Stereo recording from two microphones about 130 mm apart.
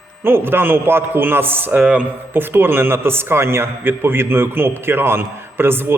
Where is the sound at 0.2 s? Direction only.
15° right (ahead or behind).